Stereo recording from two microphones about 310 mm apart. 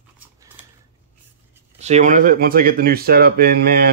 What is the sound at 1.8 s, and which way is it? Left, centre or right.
Speech, right.